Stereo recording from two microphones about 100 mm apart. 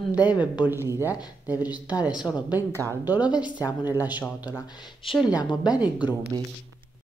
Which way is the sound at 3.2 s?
45° left (ahead or behind).